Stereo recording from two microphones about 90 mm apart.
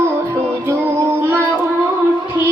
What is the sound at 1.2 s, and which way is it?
Child singing, 25° right (ahead or behind).